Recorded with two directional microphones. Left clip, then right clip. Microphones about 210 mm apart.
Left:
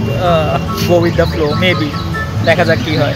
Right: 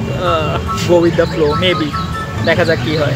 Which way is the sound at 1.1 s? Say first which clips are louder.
Right 1 dB; centre (ahead or behind).